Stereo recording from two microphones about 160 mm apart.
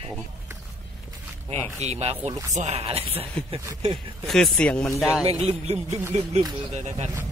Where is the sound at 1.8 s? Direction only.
40° right (ahead or behind).